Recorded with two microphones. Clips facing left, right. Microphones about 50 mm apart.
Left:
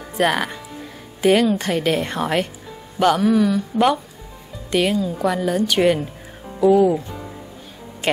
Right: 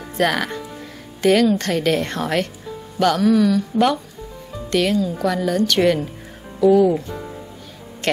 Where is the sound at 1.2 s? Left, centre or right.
Centre.